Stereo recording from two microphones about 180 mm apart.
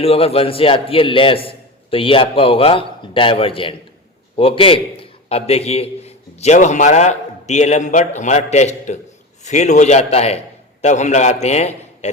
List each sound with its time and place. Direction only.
0.0 s a man's voice: 35° left (ahead or behind)